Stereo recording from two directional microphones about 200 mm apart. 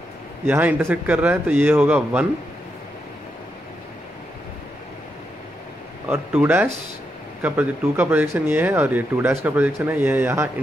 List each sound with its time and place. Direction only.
0.5 s speech: 10° right (ahead or behind)
6.0 s speech: 10° right (ahead or behind)